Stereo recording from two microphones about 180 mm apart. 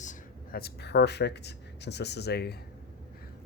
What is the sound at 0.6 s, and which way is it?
Speech, 65° left (ahead or behind).